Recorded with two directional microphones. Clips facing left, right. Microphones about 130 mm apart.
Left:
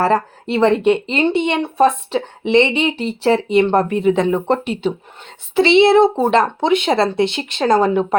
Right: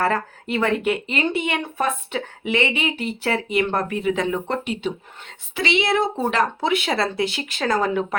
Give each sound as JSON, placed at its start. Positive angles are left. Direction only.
{"t": 0.0, "sound": "speech", "side_deg": 30}